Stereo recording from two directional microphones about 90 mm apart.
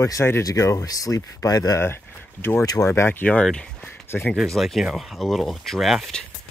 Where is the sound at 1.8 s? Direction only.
25° left (ahead or behind).